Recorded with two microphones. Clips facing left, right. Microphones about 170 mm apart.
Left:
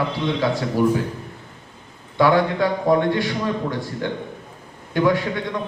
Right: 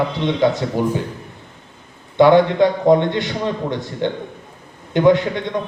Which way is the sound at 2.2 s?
20° right (ahead or behind).